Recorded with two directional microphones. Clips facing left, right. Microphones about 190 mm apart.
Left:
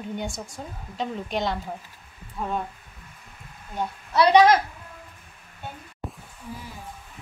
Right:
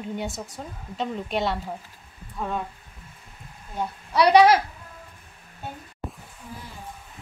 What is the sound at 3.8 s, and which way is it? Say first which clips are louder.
Speech: even; 10° right (ahead or behind).